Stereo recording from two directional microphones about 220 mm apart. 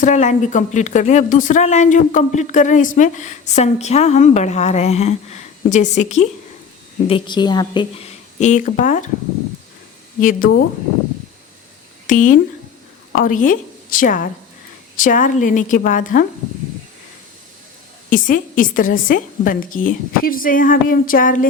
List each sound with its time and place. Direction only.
0.0 s speech: 30° left (ahead or behind)
7.1 s a woman's voice: 20° left (ahead or behind)
8.4 s speech: 35° left (ahead or behind)
10.2 s speech: 35° left (ahead or behind)
12.0 s a woman's voice: 35° left (ahead or behind)
18.1 s speech: 40° left (ahead or behind)